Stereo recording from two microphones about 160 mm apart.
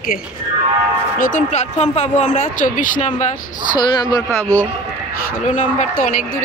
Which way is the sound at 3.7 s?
25° left (ahead or behind).